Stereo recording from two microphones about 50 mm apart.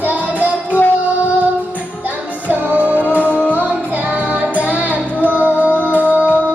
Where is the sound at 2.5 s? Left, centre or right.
Right.